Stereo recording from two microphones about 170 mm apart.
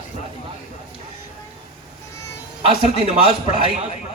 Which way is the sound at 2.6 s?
35° right (ahead or behind).